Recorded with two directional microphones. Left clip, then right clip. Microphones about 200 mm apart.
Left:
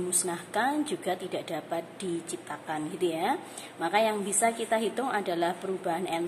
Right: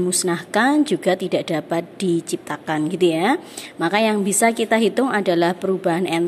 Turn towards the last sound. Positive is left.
turn(degrees=-40)  # may be behind; listen again after turning